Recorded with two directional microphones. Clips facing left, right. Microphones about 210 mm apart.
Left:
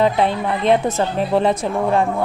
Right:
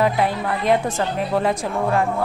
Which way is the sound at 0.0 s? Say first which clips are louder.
Left 3 dB; 25° left (ahead or behind).